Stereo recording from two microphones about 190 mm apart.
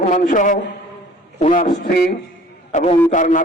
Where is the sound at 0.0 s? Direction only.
40° left (ahead or behind).